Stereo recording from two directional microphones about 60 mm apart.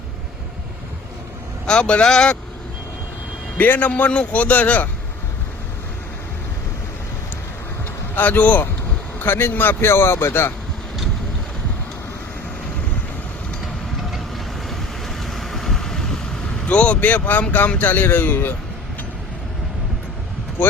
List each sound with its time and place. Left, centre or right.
1.6 s speech: centre
3.6 s a man's voice: left
8.1 s a man's voice: left
14.1 s vehicle: centre
16.6 s a man's voice: left